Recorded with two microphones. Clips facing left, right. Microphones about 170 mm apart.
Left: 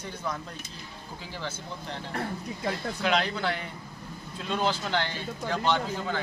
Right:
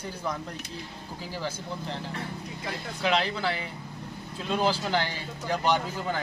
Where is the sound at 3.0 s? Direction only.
5° right (ahead or behind).